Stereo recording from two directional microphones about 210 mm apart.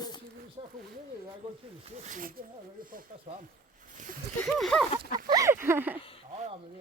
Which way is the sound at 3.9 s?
40° right (ahead or behind).